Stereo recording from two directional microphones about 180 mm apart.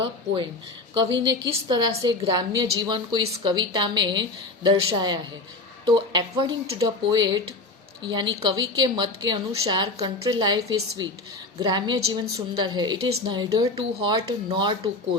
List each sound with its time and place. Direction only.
0.9 s speech: 25° right (ahead or behind)